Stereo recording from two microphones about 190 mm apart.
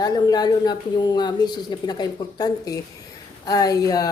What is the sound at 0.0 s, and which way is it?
A woman's voice, 20° left (ahead or behind).